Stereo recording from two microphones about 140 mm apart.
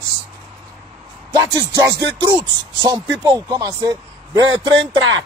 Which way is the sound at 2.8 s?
25° right (ahead or behind).